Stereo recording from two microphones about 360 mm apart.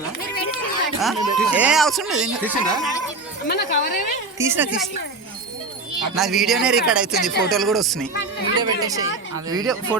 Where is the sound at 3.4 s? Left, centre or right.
Left.